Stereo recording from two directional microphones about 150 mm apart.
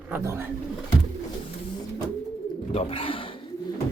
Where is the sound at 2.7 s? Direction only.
40° left (ahead or behind).